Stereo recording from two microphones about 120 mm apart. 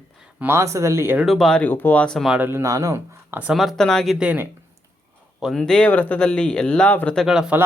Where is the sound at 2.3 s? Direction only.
15° right (ahead or behind).